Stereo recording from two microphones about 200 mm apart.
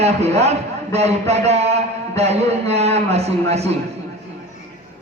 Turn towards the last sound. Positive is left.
turn(degrees=-30)  # may be behind; listen again after turning